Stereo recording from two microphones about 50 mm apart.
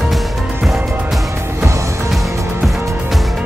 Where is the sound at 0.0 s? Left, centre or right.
Centre.